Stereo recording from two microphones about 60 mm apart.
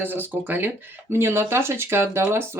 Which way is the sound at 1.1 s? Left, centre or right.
Right.